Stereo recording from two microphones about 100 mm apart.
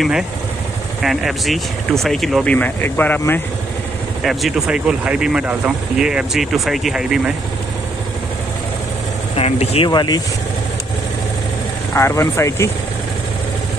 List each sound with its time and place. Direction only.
1.0 s speech: centre (ahead or behind)
2.4 s speech: 15° left (ahead or behind)
4.2 s speech: centre (ahead or behind)
9.3 s speech: 90° left
9.8 s speech: 45° left (ahead or behind)
11.9 s speech: 30° left (ahead or behind)